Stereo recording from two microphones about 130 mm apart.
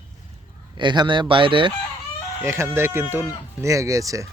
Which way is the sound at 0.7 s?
35° right (ahead or behind).